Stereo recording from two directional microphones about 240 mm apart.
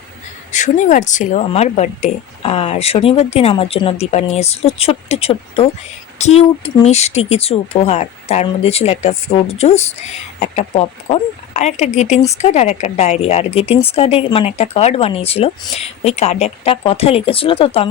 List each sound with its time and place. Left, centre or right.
0.5 s speech: left